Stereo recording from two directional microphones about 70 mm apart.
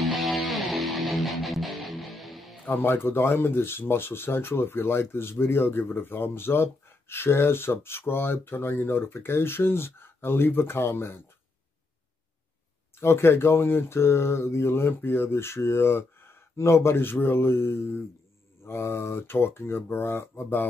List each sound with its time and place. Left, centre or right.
0.0 s music: centre
2.7 s speech: left
12.9 s speech: left